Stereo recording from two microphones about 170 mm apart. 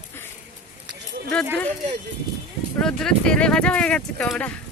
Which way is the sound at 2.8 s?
5° left (ahead or behind).